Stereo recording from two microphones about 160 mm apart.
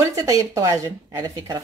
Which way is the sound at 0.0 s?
20° right (ahead or behind).